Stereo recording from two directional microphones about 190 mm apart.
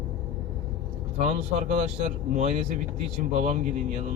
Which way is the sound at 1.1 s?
40° right (ahead or behind).